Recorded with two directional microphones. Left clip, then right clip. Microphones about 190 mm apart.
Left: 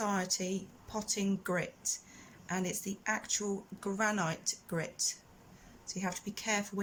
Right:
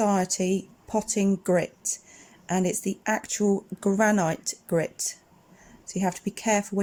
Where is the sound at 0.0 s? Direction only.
35° right (ahead or behind).